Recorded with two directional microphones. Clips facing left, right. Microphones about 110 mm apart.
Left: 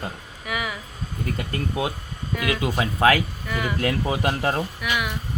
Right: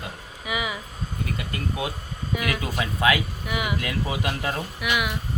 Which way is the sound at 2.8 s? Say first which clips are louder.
Left 3 dB; 35° left (ahead or behind).